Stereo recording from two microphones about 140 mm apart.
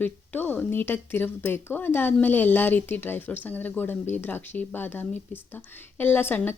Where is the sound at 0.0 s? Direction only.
15° left (ahead or behind).